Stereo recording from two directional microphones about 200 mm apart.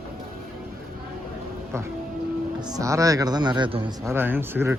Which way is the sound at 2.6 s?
20° right (ahead or behind).